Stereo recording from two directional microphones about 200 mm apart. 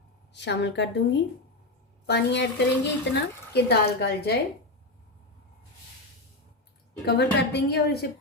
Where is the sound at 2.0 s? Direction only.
60° left (ahead or behind).